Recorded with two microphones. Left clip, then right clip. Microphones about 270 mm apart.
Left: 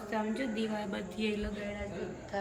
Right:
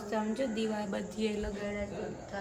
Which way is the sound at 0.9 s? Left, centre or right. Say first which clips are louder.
Right 1 dB; right.